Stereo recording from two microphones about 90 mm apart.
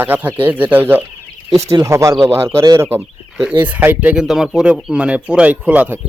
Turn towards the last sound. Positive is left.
turn(degrees=-15)  # may be behind; listen again after turning